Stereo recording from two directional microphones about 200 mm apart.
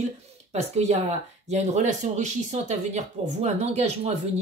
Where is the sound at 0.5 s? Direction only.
30° right (ahead or behind).